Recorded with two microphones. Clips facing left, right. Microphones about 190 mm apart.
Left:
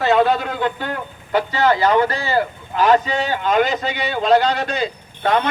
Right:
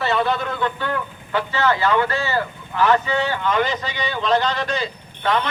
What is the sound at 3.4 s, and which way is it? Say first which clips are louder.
Speech: left 7 dB; 45° left (ahead or behind).